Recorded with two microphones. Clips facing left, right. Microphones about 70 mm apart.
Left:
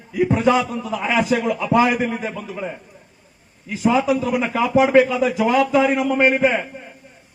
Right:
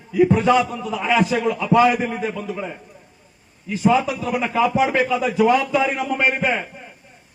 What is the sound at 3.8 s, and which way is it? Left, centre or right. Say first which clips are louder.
A man's voice: left 1 dB; centre.